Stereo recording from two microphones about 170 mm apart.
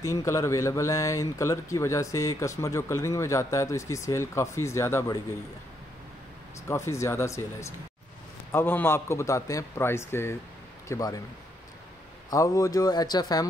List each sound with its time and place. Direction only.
0.0 s a man's voice: 20° left (ahead or behind)
6.7 s a man's voice: 15° left (ahead or behind)
12.3 s speech: 20° left (ahead or behind)